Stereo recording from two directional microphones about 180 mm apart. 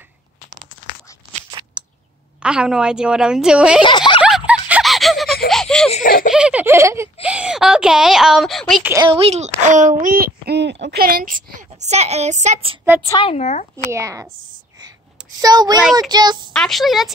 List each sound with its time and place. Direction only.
2.4 s speech: 5° right (ahead or behind)
3.8 s speech: 25° left (ahead or behind)
4.5 s a sound: 5° right (ahead or behind)
6.0 s a sound: 50° left (ahead or behind)
6.3 s a sound: 5° right (ahead or behind)
7.2 s speech: 5° right (ahead or behind)
9.0 s speech: 30° right (ahead or behind)
13.2 s speech: 35° left (ahead or behind)
13.9 s a woman's voice: 15° right (ahead or behind)
15.4 s speech: 20° right (ahead or behind)
16.5 s speech: centre (ahead or behind)